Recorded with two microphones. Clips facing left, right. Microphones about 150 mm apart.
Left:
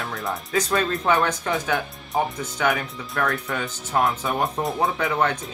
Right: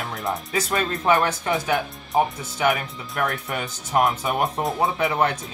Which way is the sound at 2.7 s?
20° right (ahead or behind).